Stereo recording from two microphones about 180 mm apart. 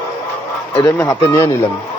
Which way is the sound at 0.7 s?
20° left (ahead or behind).